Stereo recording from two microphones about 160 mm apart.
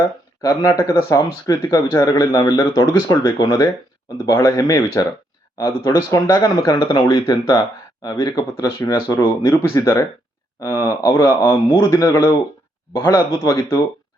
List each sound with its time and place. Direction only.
0.4 s speech: 20° left (ahead or behind)